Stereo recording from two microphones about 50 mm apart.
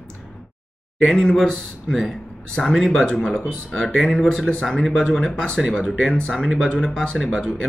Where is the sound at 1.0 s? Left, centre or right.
Centre.